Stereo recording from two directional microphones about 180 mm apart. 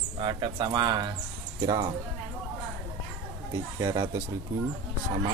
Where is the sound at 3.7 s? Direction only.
20° right (ahead or behind).